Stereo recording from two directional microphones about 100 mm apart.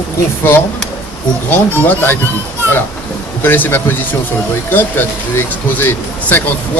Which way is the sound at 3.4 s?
20° left (ahead or behind).